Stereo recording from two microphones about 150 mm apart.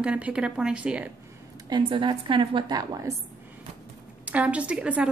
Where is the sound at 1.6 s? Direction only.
30° right (ahead or behind).